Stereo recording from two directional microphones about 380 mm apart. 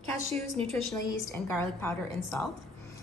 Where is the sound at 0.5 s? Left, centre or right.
Centre.